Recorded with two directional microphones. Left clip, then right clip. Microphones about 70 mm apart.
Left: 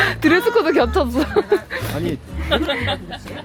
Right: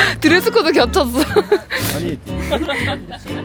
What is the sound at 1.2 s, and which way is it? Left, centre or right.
Speech, right.